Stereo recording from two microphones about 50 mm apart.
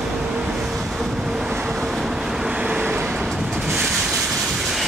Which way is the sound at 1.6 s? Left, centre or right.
Centre.